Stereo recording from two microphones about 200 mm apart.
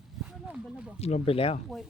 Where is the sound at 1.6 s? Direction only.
Centre (ahead or behind).